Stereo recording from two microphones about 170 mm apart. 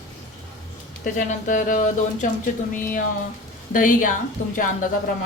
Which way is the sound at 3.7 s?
50° left (ahead or behind).